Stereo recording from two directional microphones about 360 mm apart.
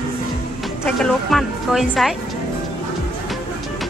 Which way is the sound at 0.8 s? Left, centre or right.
Centre.